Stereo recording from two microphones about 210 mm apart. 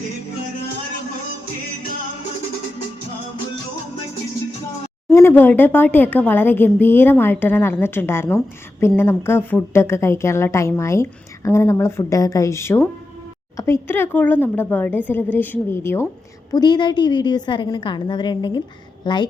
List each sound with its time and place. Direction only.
5.1 s a woman's voice: 10° left (ahead or behind)